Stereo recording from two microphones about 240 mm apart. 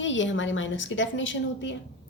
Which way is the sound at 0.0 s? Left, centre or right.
Left.